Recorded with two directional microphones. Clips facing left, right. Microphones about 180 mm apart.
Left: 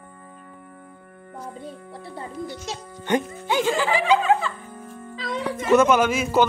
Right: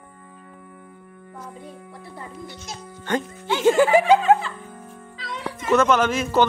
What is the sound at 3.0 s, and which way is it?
Speech, 15° left (ahead or behind).